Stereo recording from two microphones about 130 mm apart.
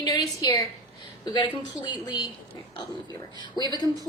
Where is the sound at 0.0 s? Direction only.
30° left (ahead or behind).